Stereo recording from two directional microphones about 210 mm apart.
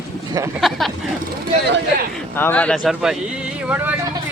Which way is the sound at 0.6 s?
Centre (ahead or behind).